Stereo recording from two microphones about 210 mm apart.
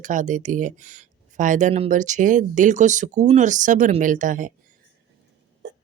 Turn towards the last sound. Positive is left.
turn(degrees=-40)  # may be behind; listen again after turning